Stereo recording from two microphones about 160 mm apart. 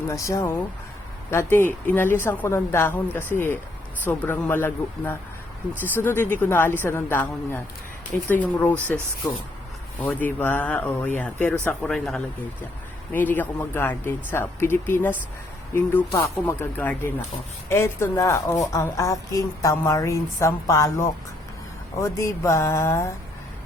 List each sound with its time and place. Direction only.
0.1 s a woman's voice: 20° left (ahead or behind)